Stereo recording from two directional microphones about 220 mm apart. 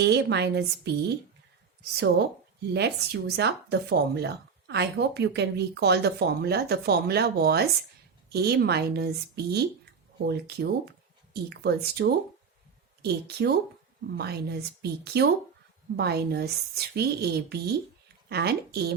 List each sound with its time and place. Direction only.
0.0 s speech: 50° right (ahead or behind)
2.7 s speech: 50° right (ahead or behind)